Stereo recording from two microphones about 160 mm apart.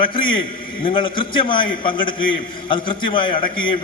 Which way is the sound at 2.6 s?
30° left (ahead or behind).